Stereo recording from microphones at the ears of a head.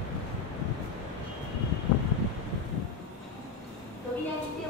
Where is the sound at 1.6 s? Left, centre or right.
Left.